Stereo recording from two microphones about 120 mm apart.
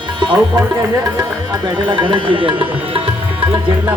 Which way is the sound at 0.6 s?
30° right (ahead or behind).